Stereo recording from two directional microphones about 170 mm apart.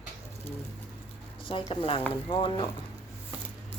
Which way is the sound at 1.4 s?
30° left (ahead or behind).